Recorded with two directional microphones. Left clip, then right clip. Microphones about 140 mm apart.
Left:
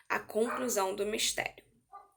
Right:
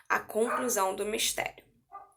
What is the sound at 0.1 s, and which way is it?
Speech, 45° left (ahead or behind).